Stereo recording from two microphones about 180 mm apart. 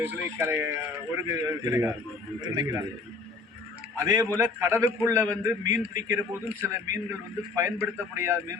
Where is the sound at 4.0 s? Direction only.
15° right (ahead or behind).